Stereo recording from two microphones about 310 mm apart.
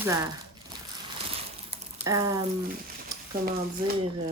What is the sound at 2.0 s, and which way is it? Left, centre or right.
Speech, centre.